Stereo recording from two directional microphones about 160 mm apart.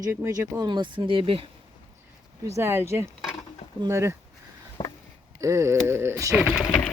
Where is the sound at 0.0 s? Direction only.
20° right (ahead or behind).